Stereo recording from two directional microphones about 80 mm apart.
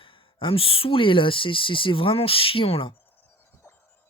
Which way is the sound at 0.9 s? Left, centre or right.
Left.